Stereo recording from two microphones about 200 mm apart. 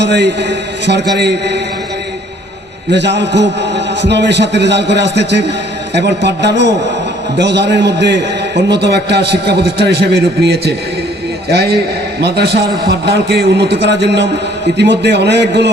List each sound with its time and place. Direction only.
0.0 s a man's voice: 60° right (ahead or behind)
2.9 s a man's voice: 60° right (ahead or behind)